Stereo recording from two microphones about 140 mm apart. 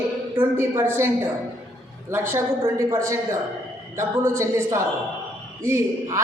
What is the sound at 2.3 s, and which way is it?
A man's voice, 20° right (ahead or behind).